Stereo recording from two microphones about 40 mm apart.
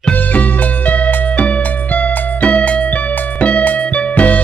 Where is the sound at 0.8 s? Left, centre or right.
Left.